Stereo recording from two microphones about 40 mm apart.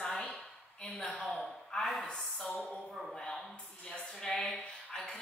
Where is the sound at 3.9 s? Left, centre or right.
Centre.